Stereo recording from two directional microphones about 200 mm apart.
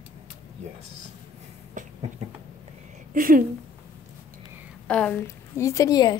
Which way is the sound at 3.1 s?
45° right (ahead or behind).